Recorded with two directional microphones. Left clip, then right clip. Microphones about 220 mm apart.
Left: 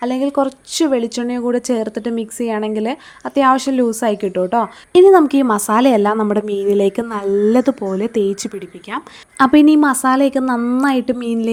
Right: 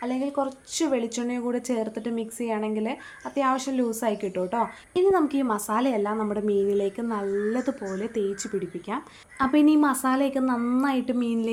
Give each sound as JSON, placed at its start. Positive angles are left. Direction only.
{"t": 0.0, "sound": "a woman's voice", "side_deg": 35}